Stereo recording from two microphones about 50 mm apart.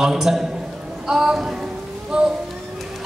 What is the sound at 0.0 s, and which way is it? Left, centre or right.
A woman's voice, centre.